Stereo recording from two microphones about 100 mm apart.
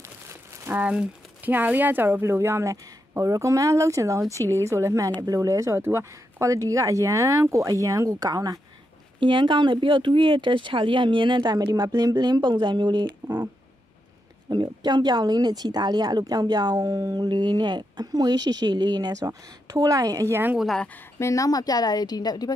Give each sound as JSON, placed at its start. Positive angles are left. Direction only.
{"t": 0.0, "sound": "crumpling", "side_deg": -25}
{"t": 0.7, "sound": "speech", "side_deg": -15}
{"t": 9.2, "sound": "speech", "side_deg": -55}
{"t": 14.5, "sound": "speech", "side_deg": -45}
{"t": 20.5, "sound": "speech", "side_deg": 0}
{"t": 21.2, "sound": "a woman's voice", "side_deg": 30}